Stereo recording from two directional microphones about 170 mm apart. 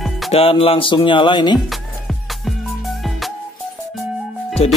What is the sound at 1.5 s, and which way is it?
Music, centre (ahead or behind).